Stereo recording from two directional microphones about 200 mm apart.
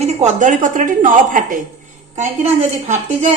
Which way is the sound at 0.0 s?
35° right (ahead or behind).